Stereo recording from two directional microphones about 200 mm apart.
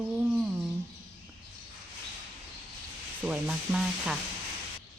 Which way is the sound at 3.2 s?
5° right (ahead or behind).